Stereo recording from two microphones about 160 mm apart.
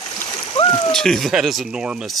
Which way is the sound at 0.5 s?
30° left (ahead or behind).